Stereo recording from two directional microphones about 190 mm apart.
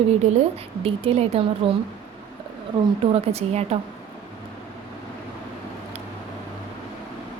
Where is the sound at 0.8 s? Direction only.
30° right (ahead or behind).